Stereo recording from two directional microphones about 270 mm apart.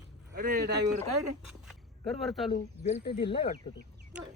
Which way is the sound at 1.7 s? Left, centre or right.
Centre.